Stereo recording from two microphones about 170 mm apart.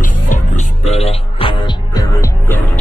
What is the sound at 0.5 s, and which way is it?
Music, 40° left (ahead or behind).